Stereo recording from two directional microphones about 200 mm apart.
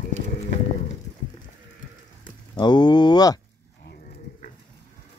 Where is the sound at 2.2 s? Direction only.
20° left (ahead or behind).